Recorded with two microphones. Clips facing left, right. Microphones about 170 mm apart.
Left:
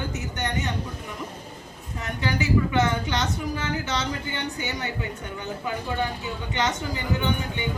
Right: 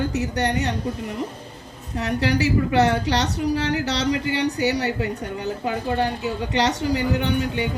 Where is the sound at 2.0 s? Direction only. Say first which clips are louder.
Right 6 dB; 75° right (ahead or behind).